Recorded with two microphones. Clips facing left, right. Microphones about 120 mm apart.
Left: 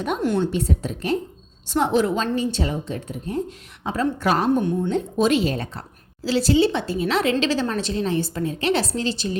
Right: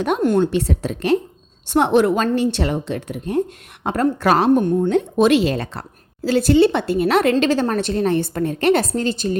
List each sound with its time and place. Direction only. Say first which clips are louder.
0.2 s a woman's voice: right 5 dB; 50° right (ahead or behind)
0.5 s speech: right 4 dB; 85° right
1.6 s a woman's voice: right 5 dB; 60° right (ahead or behind)
3.8 s a woman's voice: right 4 dB; 60° right (ahead or behind); by 5.8 s 90° right
6.2 s a woman's voice: right 4 dB; 55° right (ahead or behind)